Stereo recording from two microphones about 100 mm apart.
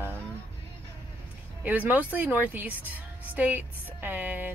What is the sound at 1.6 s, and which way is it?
Speech, 15° right (ahead or behind).